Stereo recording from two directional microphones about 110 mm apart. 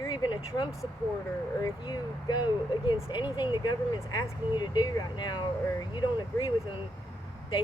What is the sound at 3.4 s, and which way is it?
Speech, 40° left (ahead or behind).